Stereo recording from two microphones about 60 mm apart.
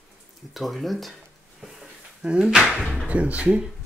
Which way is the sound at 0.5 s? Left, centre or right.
Centre.